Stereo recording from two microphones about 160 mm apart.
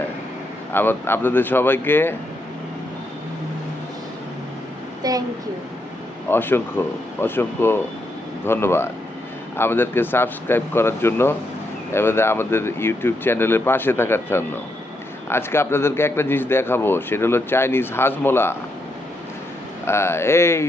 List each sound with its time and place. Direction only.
0.7 s a man's voice: 15° left (ahead or behind)
5.0 s a woman's voice: 25° right (ahead or behind)
6.3 s a man's voice: 15° left (ahead or behind)
19.9 s a man's voice: 15° left (ahead or behind)